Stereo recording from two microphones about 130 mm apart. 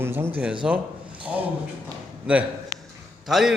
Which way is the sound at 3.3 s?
Centre (ahead or behind).